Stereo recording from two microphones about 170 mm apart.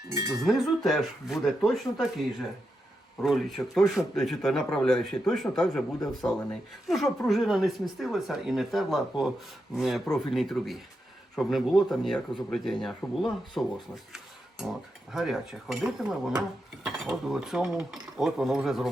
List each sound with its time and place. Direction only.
0.1 s cutlery: 20° right (ahead or behind)
0.4 s speech: centre (ahead or behind)
3.2 s speech: centre (ahead or behind)